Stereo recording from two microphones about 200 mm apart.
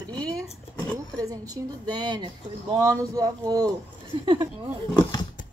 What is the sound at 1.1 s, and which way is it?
Speech, 15° right (ahead or behind).